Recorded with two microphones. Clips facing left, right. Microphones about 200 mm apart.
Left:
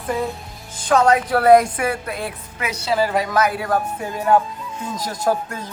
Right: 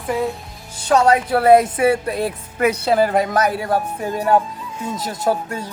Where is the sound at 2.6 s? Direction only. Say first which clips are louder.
Right 5 dB; 55° right (ahead or behind); by 3.7 s 40° right (ahead or behind).